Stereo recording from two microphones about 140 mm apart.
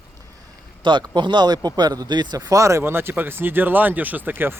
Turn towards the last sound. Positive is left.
turn(degrees=-15)  # may be behind; listen again after turning